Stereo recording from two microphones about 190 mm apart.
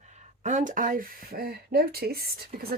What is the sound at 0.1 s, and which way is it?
Speech, 40° right (ahead or behind).